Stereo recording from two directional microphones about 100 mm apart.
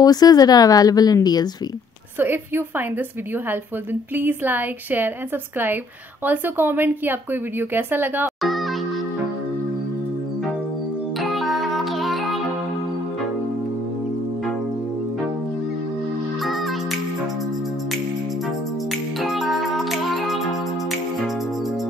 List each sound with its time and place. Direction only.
0.0 s speech: 40° left (ahead or behind)
2.1 s a woman's voice: 20° right (ahead or behind)
4.1 s a woman's voice: 20° right (ahead or behind)
6.2 s a woman's voice: 20° right (ahead or behind)
8.4 s music: centre (ahead or behind)
11.1 s music: centre (ahead or behind)
19.2 s music: centre (ahead or behind)